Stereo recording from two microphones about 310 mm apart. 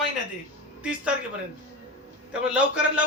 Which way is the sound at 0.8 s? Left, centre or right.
Centre.